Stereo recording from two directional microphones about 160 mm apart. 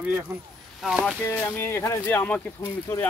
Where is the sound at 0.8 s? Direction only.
5° right (ahead or behind).